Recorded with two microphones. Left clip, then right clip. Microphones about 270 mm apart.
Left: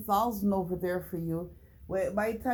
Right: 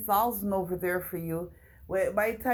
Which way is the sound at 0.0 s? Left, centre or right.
Centre.